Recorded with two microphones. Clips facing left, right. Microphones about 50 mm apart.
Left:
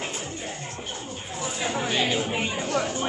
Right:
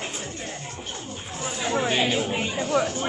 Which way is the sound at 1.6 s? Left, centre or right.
Centre.